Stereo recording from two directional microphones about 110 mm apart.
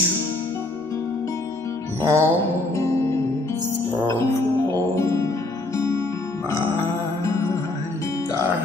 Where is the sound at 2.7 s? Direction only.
25° left (ahead or behind).